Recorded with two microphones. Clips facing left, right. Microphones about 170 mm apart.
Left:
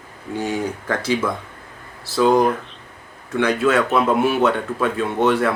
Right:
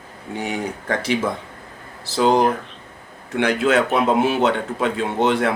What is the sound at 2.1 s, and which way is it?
Speech, 25° right (ahead or behind).